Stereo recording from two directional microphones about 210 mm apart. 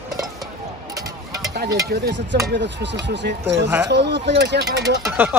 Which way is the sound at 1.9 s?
50° right (ahead or behind).